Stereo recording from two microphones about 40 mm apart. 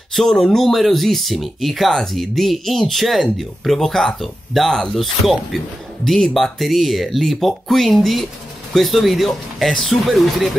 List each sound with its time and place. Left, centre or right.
0.1 s speech: centre
6.0 s speech: centre
6.3 s speech: centre